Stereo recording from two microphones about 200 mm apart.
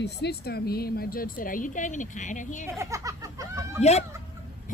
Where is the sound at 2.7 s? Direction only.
15° right (ahead or behind).